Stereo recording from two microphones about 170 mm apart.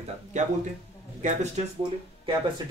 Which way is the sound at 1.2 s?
45° right (ahead or behind).